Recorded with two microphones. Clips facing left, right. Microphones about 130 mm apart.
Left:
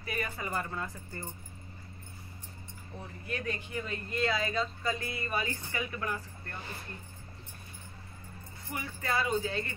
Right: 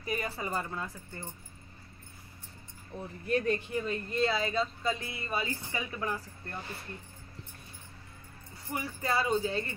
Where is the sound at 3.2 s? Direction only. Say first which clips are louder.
Right 8 dB; 35° right (ahead or behind).